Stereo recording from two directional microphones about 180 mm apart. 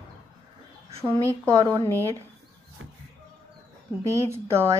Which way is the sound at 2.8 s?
90° right.